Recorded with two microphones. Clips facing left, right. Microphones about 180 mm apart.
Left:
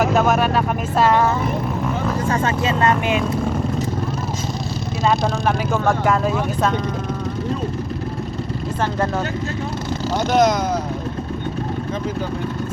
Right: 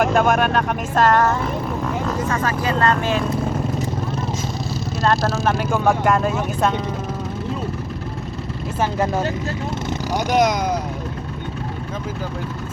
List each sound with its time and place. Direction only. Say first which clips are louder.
0.0 s speech: even; 5° left (ahead or behind)
2.2 s speech: left 2 dB; 25° left (ahead or behind)
5.0 s speech: even; centre (ahead or behind)
8.8 s speech: right 1 dB; 10° right (ahead or behind)